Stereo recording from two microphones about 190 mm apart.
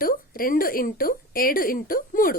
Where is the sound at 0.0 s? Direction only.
50° left (ahead or behind).